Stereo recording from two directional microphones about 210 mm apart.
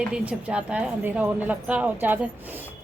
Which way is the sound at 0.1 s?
5° right (ahead or behind).